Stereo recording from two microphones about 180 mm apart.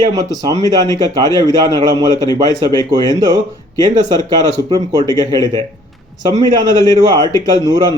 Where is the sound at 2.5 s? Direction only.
20° right (ahead or behind).